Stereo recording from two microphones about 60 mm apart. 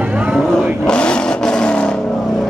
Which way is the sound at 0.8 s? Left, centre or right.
Centre.